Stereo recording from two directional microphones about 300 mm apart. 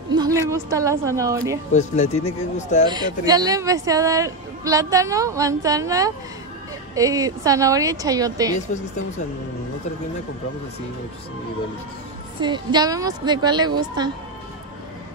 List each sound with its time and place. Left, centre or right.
0.1 s speech: centre
1.7 s speech: left
2.9 s speech: centre
12.4 s speech: centre